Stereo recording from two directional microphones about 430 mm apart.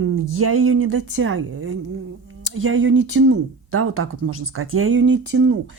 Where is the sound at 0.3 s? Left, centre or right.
Right.